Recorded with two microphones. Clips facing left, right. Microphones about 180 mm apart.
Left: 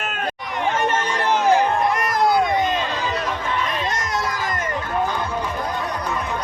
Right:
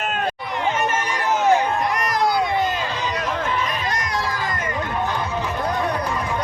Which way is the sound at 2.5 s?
20° left (ahead or behind).